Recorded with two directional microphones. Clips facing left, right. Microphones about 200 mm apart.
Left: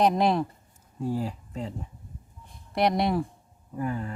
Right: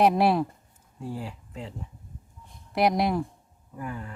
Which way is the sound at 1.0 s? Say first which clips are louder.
Left 6 dB; 40° left (ahead or behind).